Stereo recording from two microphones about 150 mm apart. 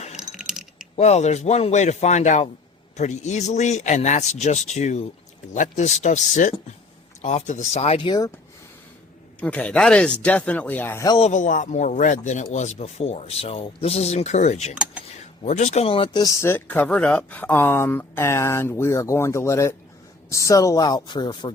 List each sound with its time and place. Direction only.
0.2 s a sound: 5° right (ahead or behind)
0.9 s speech: 45° left (ahead or behind)
9.4 s speech: 10° left (ahead or behind)
11.2 s speech: 55° left (ahead or behind); by 16.2 s 40° left (ahead or behind)
16.2 s speech: 20° left (ahead or behind)